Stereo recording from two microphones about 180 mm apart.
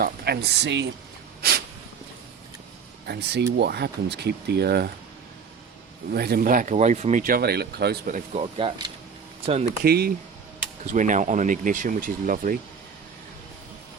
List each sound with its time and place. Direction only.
0.0 s speech: 60° right (ahead or behind)
1.4 s snort: 60° right (ahead or behind)
3.1 s speech: 65° right (ahead or behind)
6.1 s speech: 60° right (ahead or behind)
8.4 s speech: 30° right (ahead or behind)
9.6 s speech: 60° right (ahead or behind)
10.9 s speech: 45° right (ahead or behind)